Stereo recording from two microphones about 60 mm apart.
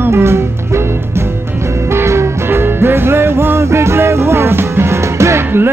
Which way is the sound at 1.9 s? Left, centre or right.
Right.